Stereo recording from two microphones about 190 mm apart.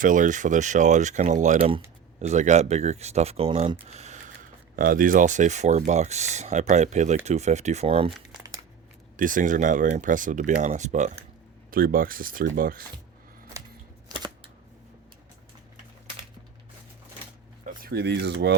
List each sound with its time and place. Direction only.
0.0 s speech: 45° right (ahead or behind)
4.8 s speech: 45° right (ahead or behind)
9.1 s speech: 45° right (ahead or behind)
13.5 s a sound: 15° right (ahead or behind)
17.6 s speech: 50° right (ahead or behind); by 18.5 s 65° right (ahead or behind)